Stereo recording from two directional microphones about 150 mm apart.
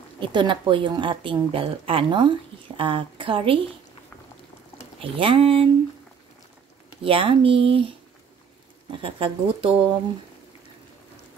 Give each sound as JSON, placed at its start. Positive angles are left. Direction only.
{"t": 0.2, "sound": "a woman's voice", "side_deg": -35}
{"t": 5.0, "sound": "a woman's voice", "side_deg": -35}
{"t": 7.0, "sound": "a woman's voice", "side_deg": -35}
{"t": 9.0, "sound": "a woman's voice", "side_deg": -35}